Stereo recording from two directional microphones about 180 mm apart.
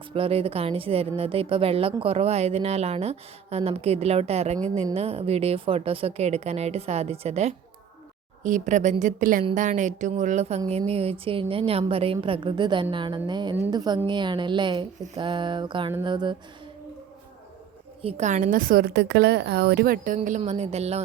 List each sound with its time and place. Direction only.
0.1 s a woman's voice: 30° right (ahead or behind)
18.0 s a woman's voice: 40° right (ahead or behind)